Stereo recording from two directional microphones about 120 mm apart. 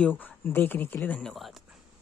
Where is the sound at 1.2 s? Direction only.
Centre (ahead or behind).